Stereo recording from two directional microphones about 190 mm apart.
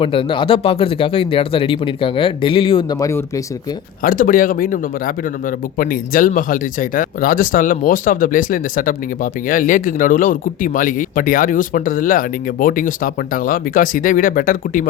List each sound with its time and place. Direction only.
0.0 s speech: 30° left (ahead or behind)
4.0 s speech: 45° left (ahead or behind)